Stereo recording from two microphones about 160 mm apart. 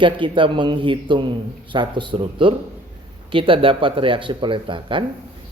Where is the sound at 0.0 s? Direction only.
30° right (ahead or behind).